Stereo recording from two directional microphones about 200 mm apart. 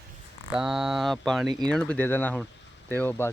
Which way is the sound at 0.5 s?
5° right (ahead or behind).